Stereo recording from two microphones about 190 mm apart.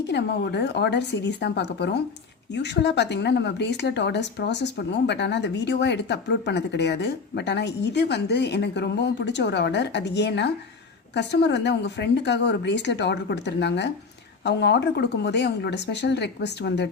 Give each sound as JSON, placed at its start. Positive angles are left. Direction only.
{"t": 0.1, "sound": "speech", "side_deg": 65}